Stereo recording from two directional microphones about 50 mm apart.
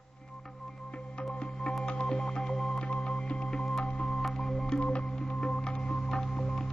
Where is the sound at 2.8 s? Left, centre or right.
Left.